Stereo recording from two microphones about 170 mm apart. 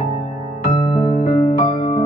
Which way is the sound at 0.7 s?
35° left (ahead or behind).